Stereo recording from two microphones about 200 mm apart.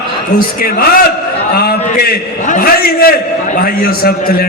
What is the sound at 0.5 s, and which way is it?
A man's voice, 45° left (ahead or behind).